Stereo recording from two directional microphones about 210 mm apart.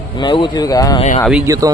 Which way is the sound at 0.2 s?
20° left (ahead or behind).